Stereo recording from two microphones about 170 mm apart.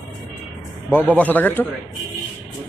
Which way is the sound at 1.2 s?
10° left (ahead or behind).